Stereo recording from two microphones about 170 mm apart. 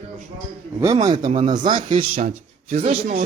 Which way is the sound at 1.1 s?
40° right (ahead or behind).